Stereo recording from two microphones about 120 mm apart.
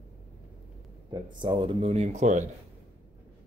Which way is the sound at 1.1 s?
40° right (ahead or behind).